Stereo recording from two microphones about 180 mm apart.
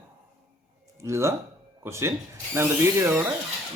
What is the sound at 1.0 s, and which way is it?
Speech, 15° right (ahead or behind).